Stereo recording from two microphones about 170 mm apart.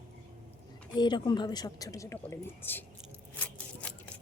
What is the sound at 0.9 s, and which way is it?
A woman's voice, 25° left (ahead or behind).